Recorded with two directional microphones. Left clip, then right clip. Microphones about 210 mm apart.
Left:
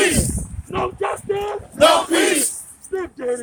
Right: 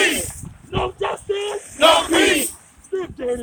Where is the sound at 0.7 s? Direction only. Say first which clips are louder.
Left 1 dB; centre (ahead or behind).